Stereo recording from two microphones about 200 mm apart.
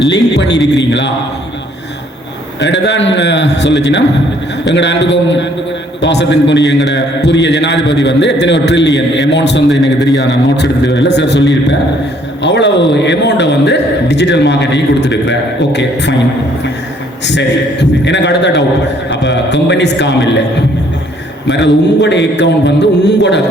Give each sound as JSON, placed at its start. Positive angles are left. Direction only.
{"t": 0.1, "sound": "a man's voice", "side_deg": 60}
{"t": 2.6, "sound": "a man's voice", "side_deg": 60}
{"t": 17.2, "sound": "a man's voice", "side_deg": 60}
{"t": 21.5, "sound": "a man's voice", "side_deg": 60}